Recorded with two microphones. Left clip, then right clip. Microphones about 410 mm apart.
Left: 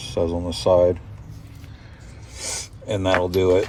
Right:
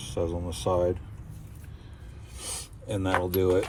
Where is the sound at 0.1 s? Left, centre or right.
Left.